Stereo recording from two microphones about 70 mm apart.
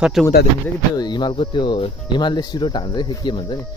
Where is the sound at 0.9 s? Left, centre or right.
Left.